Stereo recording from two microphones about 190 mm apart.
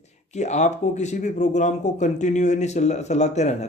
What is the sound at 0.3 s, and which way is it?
Speech, 35° left (ahead or behind).